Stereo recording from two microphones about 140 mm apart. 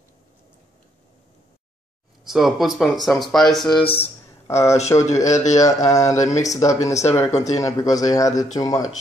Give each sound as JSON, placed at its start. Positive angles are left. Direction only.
{"t": 2.2, "sound": "speech", "side_deg": 0}
{"t": 3.8, "sound": "speech", "side_deg": 40}
{"t": 4.5, "sound": "speech", "side_deg": 20}